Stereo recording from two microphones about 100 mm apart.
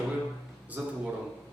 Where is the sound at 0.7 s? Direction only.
15° right (ahead or behind).